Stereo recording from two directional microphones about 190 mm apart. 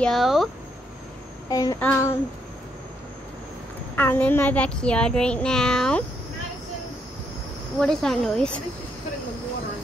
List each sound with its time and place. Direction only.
0.0 s a child's voice: centre (ahead or behind)
1.5 s child singing: 20° left (ahead or behind)
3.9 s a child's voice: 10° left (ahead or behind)
7.8 s a child's voice: 5° left (ahead or behind)